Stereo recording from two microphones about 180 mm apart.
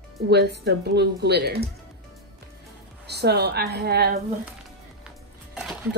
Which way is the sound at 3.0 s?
65° right (ahead or behind).